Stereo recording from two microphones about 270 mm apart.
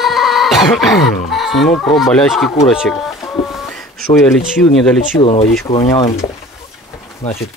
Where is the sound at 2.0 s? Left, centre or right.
Centre.